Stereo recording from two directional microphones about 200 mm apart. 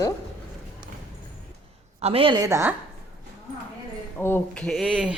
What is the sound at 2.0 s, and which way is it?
Speech, 30° right (ahead or behind).